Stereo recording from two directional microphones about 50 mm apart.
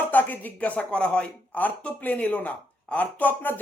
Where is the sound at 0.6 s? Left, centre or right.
Left.